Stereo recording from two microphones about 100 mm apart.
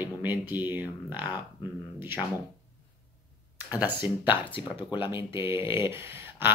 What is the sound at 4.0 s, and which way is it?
Speech, 50° left (ahead or behind).